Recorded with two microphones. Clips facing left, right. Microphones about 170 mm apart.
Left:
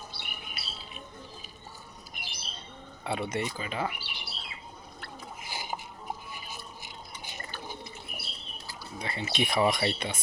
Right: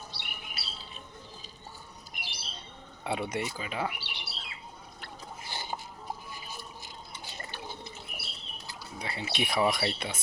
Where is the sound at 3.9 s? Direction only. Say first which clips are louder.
Even; 70° right (ahead or behind).